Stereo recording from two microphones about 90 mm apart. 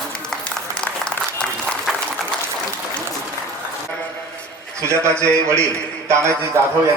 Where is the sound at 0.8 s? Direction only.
10° left (ahead or behind).